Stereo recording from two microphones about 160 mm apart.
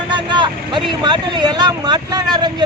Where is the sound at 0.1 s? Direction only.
30° right (ahead or behind).